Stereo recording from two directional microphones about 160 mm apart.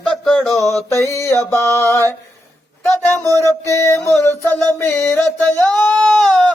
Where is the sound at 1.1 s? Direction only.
15° left (ahead or behind).